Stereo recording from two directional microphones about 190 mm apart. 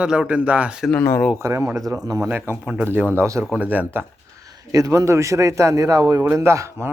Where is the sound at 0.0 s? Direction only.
5° right (ahead or behind).